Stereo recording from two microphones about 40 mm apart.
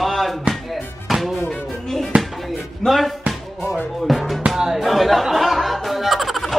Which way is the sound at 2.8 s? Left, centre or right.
Centre.